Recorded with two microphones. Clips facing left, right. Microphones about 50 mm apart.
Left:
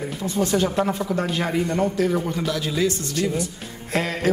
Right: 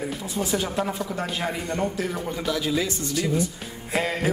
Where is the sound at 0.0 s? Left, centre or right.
Centre.